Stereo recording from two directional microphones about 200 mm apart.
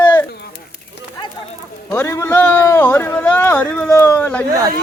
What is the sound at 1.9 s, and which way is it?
A man's voice, 10° left (ahead or behind).